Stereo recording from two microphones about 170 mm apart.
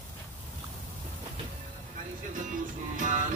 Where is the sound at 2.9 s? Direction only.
50° right (ahead or behind).